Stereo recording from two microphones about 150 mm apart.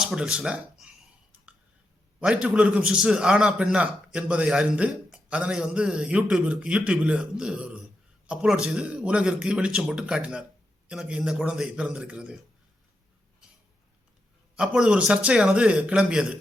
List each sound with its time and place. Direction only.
0.0 s speech: 5° right (ahead or behind)
2.2 s a man's voice: 5° right (ahead or behind)
14.5 s a man's voice: 5° right (ahead or behind)